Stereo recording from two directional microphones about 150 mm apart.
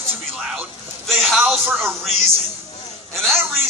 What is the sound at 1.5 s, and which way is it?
Speech, 15° right (ahead or behind).